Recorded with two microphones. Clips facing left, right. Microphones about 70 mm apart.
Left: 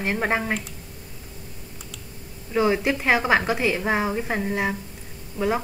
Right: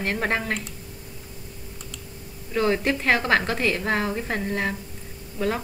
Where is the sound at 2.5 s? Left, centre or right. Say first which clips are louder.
Left 1 dB; centre.